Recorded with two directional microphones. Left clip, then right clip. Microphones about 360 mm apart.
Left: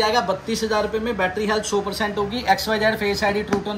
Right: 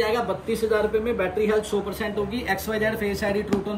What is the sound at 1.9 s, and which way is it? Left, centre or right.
Speech, centre.